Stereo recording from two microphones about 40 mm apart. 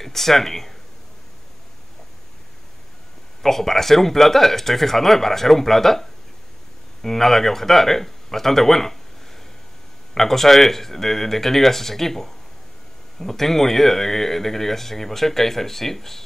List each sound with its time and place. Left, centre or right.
0.0 s speech: centre
3.4 s speech: centre
10.1 s speech: centre